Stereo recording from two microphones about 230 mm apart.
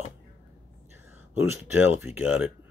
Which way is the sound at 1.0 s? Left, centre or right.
Centre.